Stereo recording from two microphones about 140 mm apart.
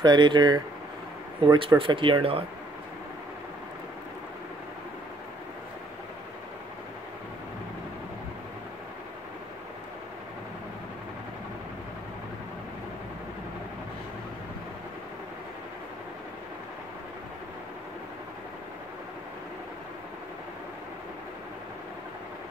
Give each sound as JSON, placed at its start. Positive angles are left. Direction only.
{"t": 0.0, "sound": "speech", "side_deg": -30}